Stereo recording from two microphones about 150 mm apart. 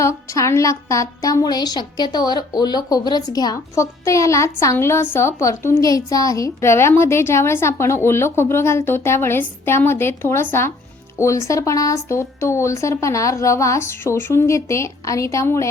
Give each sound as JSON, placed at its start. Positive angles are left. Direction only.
{"t": 0.0, "sound": "a woman's voice", "side_deg": 20}